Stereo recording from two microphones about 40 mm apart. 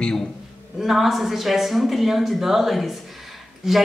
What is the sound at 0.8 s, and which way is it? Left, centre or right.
Speech, centre.